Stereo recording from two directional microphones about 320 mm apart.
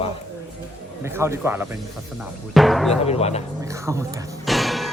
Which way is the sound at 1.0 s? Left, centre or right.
Centre.